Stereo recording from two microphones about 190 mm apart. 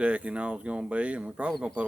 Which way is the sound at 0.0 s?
5° right (ahead or behind).